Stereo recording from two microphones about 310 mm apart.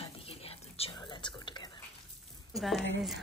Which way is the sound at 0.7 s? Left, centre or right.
Centre.